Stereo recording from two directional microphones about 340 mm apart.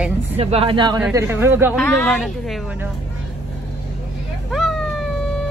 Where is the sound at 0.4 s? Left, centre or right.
Centre.